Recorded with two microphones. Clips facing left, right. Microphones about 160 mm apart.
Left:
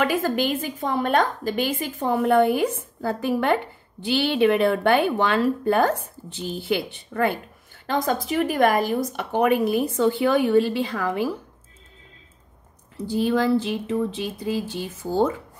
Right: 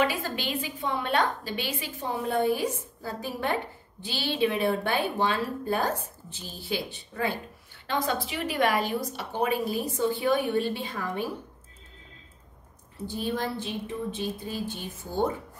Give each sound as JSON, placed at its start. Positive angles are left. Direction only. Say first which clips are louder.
{"t": 0.0, "sound": "a woman's voice", "louder": "left 6 dB", "side_deg": 50}
{"t": 7.8, "sound": "a woman's voice", "louder": "left 5 dB", "side_deg": 45}
{"t": 13.1, "sound": "speech", "louder": "left 10 dB", "side_deg": 90}